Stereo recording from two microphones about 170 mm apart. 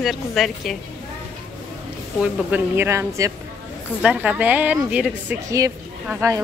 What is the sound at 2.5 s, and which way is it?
Speech, 15° right (ahead or behind).